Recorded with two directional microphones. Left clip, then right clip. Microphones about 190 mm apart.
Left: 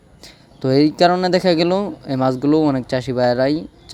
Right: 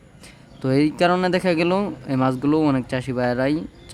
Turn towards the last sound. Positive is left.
turn(degrees=15)  # may be behind; listen again after turning